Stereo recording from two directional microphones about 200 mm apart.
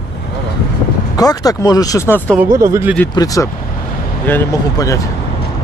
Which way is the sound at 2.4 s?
15° right (ahead or behind).